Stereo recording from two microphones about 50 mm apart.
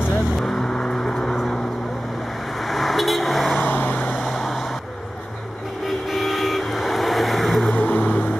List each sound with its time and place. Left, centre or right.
0.1 s vehicle: centre
2.6 s vehicle: centre
3.5 s vehicle: left
4.3 s vehicle: centre
5.9 s vehicle: centre
7.7 s vehicle: left